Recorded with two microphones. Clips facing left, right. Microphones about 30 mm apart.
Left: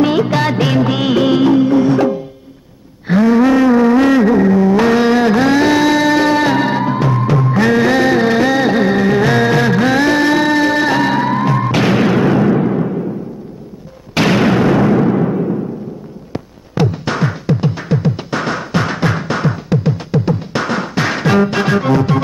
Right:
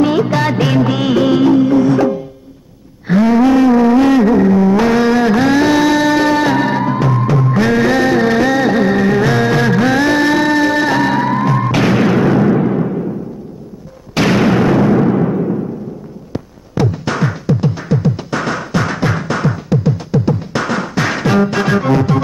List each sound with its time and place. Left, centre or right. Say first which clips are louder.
0.0 s music of bollywood: even; centre
3.4 s a sound: right 1 dB; centre
7.5 s music: left 1 dB; centre
14.1 s a sound: even; centre
14.8 s timpani: even; centre
16.7 s music: even; left